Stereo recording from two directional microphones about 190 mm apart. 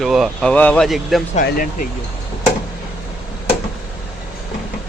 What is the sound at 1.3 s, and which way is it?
Speech, 45° left (ahead or behind).